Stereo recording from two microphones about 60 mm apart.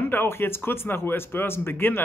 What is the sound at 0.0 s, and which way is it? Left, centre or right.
Speech, left.